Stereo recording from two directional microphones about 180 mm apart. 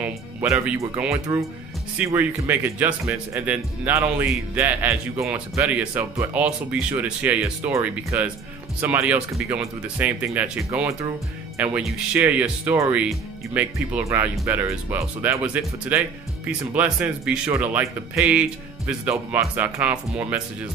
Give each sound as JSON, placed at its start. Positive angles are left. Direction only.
{"t": 0.0, "sound": "speech", "side_deg": -10}